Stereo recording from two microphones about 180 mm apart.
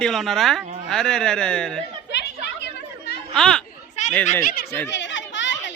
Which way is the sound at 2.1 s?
70° left (ahead or behind).